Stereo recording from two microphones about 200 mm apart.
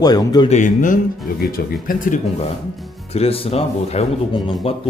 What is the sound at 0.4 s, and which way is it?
Speech, 35° left (ahead or behind).